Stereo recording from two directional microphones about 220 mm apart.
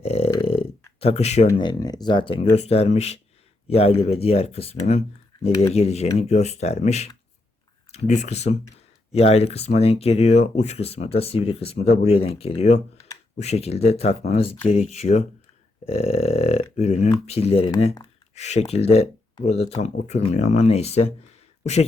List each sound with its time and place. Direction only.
0.0 s burping: 30° left (ahead or behind)
0.9 s speech: 30° left (ahead or behind)
1.5 s speech: 20° left (ahead or behind)